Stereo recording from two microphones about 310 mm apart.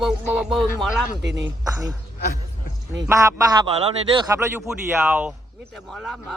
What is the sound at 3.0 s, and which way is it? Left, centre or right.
Speech, centre.